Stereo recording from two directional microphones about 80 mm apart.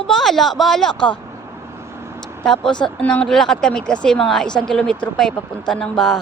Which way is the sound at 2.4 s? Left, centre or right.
Centre.